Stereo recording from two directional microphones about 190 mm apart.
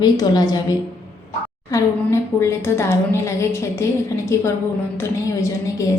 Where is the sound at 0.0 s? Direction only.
20° left (ahead or behind).